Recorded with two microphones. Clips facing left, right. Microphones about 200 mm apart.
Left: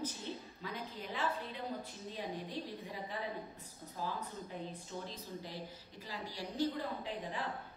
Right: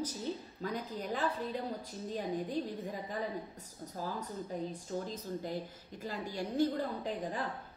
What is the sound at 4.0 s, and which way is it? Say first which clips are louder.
A woman's voice: right 2 dB; 45° right (ahead or behind).